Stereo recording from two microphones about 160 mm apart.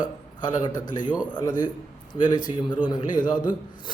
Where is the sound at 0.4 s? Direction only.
25° left (ahead or behind).